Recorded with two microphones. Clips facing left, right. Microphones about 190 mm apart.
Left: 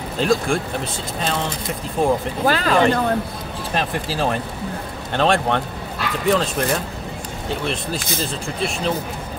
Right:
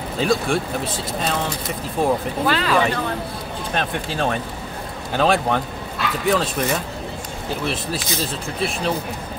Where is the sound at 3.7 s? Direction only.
Centre (ahead or behind).